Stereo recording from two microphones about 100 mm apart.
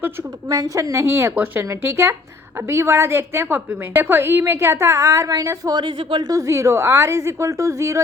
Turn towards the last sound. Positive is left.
turn(degrees=-30)  # may be behind; listen again after turning